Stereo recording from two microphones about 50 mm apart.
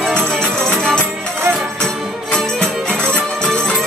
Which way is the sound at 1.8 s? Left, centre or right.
Centre.